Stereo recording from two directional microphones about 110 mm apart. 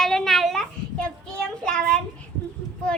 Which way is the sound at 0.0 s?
5° left (ahead or behind).